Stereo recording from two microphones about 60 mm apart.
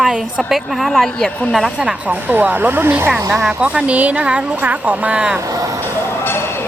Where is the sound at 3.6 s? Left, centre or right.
Centre.